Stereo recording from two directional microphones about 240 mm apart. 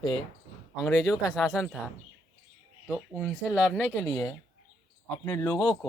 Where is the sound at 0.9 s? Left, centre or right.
Centre.